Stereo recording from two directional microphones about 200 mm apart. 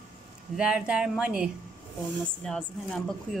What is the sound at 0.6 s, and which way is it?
A woman's voice, 5° right (ahead or behind).